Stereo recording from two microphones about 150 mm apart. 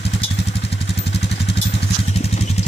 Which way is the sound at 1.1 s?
40° left (ahead or behind).